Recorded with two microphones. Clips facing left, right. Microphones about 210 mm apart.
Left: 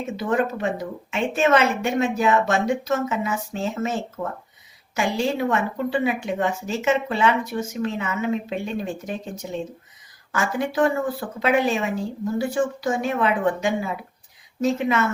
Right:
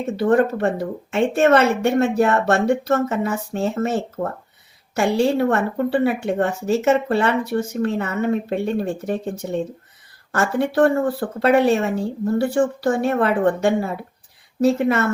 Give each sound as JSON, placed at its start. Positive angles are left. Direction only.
{"t": 0.2, "sound": "speech", "side_deg": -65}